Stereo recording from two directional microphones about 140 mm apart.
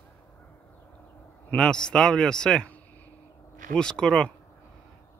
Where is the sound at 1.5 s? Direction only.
5° left (ahead or behind).